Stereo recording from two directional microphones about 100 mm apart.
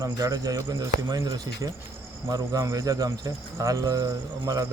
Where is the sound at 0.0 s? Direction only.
35° right (ahead or behind).